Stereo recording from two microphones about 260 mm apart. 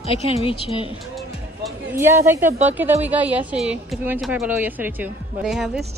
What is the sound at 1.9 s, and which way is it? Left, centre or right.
Speech, centre.